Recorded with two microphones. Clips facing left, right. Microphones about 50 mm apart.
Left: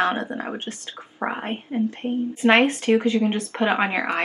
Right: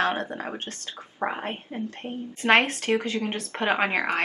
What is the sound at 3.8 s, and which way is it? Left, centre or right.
Speech, centre.